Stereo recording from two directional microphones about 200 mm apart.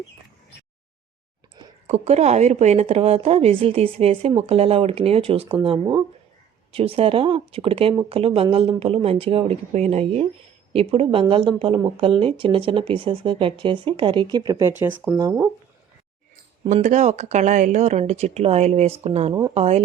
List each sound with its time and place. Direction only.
1.5 s speech: 35° right (ahead or behind); by 15.4 s 15° right (ahead or behind)
16.6 s speech: 35° right (ahead or behind)
19.3 s speech: 20° right (ahead or behind)
19.5 s speech: 30° right (ahead or behind)